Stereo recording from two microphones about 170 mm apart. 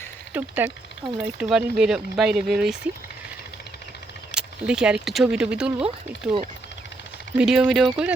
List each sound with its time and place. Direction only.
0.3 s speech: 10° right (ahead or behind)
4.4 s speech: 5° right (ahead or behind)
7.3 s speech: 5° right (ahead or behind)